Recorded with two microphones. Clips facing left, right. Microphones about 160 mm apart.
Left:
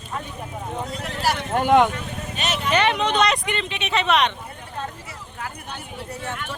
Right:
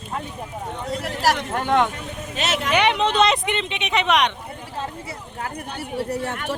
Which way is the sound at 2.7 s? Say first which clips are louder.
Even; 15° right (ahead or behind).